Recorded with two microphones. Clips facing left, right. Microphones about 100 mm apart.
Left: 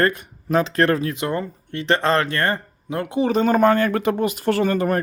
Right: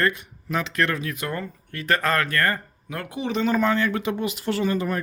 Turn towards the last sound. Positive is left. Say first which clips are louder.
# left 5 dB
turn(degrees=50)  # may be behind; listen again after turning